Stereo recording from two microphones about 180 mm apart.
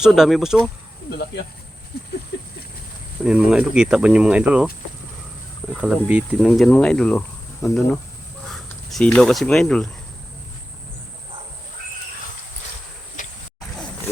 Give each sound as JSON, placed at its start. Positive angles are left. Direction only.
{"t": 0.0, "sound": "speech", "side_deg": 0}
{"t": 1.1, "sound": "speech", "side_deg": 70}
{"t": 2.3, "sound": "a sound", "side_deg": 80}
{"t": 3.2, "sound": "speech", "side_deg": -5}
{"t": 5.7, "sound": "speech", "side_deg": -5}
{"t": 13.2, "sound": "a sound", "side_deg": 45}